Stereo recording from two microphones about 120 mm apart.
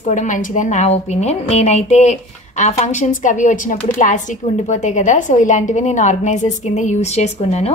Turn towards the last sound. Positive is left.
turn(degrees=60)  # may be behind; listen again after turning